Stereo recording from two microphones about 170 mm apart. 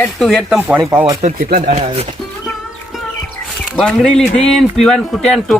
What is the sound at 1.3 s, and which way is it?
Speech, 60° right (ahead or behind).